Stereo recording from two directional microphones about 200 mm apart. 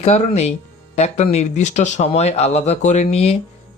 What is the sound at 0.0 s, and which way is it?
Speech, 35° left (ahead or behind).